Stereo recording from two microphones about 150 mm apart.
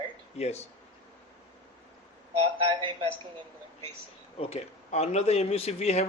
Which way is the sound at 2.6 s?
35° right (ahead or behind).